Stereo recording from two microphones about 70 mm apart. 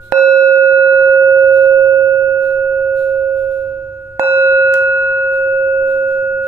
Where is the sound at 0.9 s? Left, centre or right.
Right.